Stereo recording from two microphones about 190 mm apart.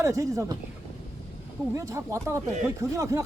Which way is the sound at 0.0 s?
15° right (ahead or behind).